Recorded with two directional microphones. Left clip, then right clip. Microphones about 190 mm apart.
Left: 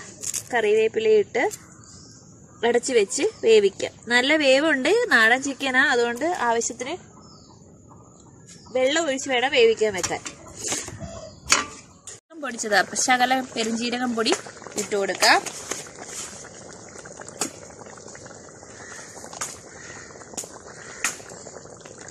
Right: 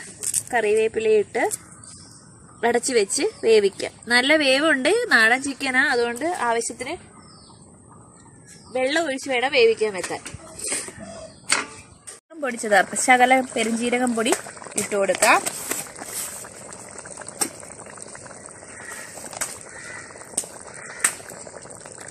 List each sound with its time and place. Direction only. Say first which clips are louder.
0.4 s speech: even; 5° right (ahead or behind)
2.6 s a woman's voice: even; 10° right (ahead or behind)
8.7 s a woman's voice: left 1 dB; 5° right (ahead or behind)
9.2 s speech: right 1 dB; 10° left (ahead or behind)
12.4 s speech: right 3 dB; 30° right (ahead or behind)